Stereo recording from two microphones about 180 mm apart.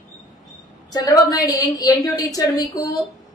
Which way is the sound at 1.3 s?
20° left (ahead or behind).